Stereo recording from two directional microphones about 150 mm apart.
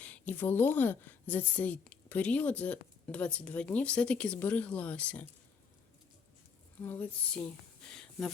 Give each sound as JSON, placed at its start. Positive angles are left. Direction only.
{"t": 0.0, "sound": "a woman's voice", "side_deg": 10}
{"t": 6.8, "sound": "a woman's voice", "side_deg": 15}